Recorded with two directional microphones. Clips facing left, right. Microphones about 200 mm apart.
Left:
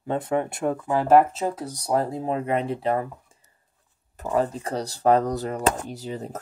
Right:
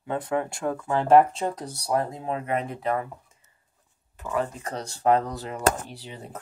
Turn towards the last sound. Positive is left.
turn(degrees=40)  # may be behind; listen again after turning